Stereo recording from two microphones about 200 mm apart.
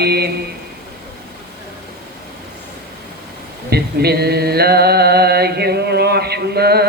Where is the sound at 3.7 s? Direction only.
50° right (ahead or behind).